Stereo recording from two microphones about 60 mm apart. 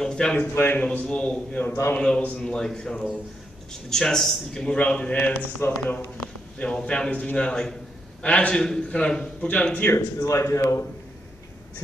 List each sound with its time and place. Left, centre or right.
0.0 s a sound: centre
0.4 s a man's voice: left
0.8 s a man's voice: centre
4.7 s a man's voice: left
5.6 s speech: left
6.6 s a man's voice: centre
9.9 s speech: left